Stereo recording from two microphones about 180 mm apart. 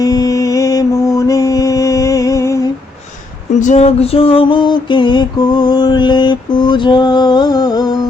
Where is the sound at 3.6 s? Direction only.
40° left (ahead or behind); by 7.9 s 20° left (ahead or behind).